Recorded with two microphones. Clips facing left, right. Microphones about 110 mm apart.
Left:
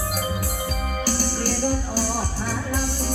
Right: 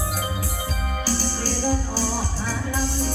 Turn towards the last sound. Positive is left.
turn(degrees=55)  # may be behind; listen again after turning